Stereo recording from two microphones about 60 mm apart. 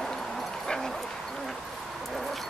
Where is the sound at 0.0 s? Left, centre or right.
Centre.